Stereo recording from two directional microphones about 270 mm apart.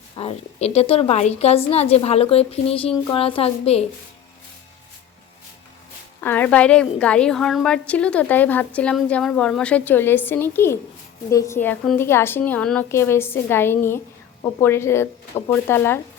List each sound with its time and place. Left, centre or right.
0.2 s a woman's voice: left
6.2 s a woman's voice: centre